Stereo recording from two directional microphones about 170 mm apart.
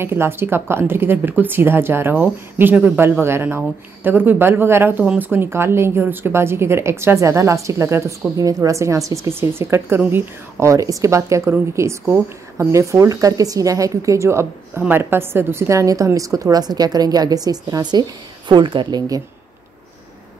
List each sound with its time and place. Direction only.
0.0 s a woman's voice: 15° right (ahead or behind)